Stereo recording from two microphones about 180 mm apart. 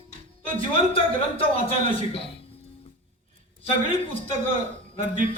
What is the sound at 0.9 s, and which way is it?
A man's voice, 30° left (ahead or behind).